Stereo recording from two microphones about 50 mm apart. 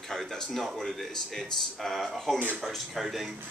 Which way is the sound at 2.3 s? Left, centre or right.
Right.